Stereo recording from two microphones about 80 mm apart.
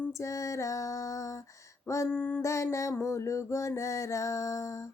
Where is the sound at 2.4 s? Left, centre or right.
Left.